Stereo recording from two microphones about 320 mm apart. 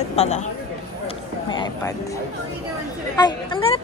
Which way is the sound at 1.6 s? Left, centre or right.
Centre.